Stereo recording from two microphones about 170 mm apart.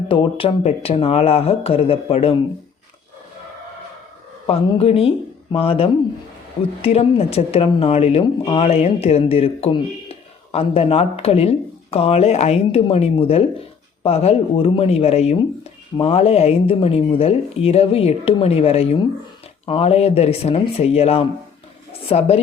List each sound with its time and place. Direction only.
0.1 s speech: 30° left (ahead or behind)
4.4 s speech: 35° left (ahead or behind)